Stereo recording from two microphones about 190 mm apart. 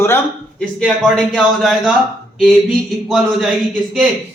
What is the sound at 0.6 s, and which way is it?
A man's voice, centre (ahead or behind).